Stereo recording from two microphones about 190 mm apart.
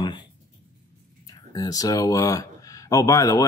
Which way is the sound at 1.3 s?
20° left (ahead or behind).